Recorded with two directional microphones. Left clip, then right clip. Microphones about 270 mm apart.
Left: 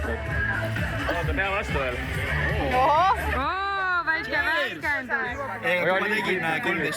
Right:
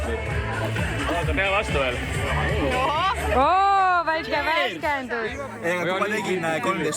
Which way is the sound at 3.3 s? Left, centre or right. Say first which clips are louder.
Right 8 dB; centre.